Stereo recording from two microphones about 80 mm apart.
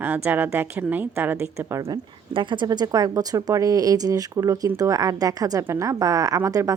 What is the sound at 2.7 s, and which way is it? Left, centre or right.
A woman's voice, right.